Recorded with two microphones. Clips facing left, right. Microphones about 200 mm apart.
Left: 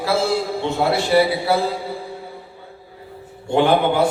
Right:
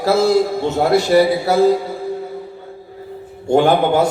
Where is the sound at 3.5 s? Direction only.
45° right (ahead or behind).